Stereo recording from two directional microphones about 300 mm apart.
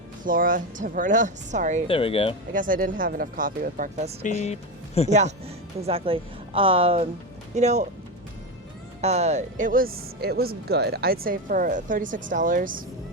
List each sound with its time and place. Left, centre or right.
0.3 s speech: right
1.9 s speech: centre
2.5 s speech: right
4.2 s speech: left
5.8 s speech: centre
9.0 s speech: right